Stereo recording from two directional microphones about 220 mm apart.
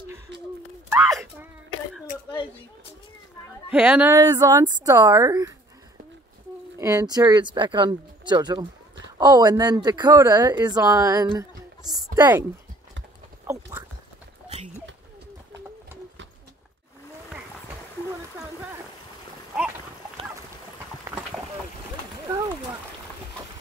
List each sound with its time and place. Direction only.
0.9 s speech: 5° right (ahead or behind)
3.7 s speech: 5° right (ahead or behind)
6.8 s speech: 15° right (ahead or behind)
13.5 s clip-clop: 15° right (ahead or behind)
21.0 s clip-clop: 10° right (ahead or behind)